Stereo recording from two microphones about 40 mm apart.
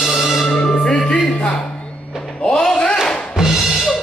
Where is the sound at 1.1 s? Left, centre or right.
Left.